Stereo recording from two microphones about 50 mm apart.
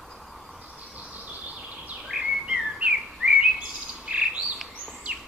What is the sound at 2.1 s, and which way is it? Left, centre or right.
Bird vocalization, centre.